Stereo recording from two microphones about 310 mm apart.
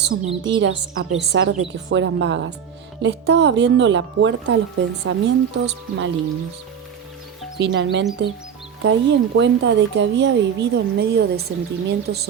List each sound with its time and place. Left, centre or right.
0.0 s speech: right
7.6 s speech: right